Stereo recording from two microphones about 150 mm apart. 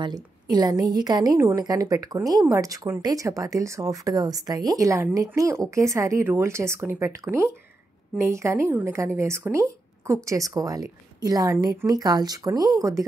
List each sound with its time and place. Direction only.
0.0 s speech: 25° right (ahead or behind)